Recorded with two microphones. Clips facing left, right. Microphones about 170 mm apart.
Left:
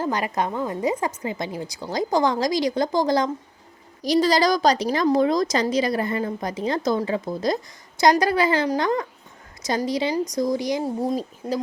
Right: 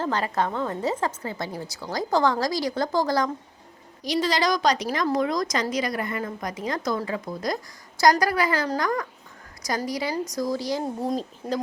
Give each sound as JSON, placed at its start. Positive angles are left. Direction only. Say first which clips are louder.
{"t": 0.0, "sound": "a woman's voice", "louder": "left 1 dB", "side_deg": 15}
{"t": 4.0, "sound": "a woman's voice", "louder": "left 5 dB", "side_deg": 35}
{"t": 10.8, "sound": "a woman's voice", "louder": "left 3 dB", "side_deg": 5}